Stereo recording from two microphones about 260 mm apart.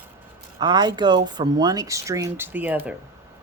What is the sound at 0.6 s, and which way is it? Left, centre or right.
Speech, centre.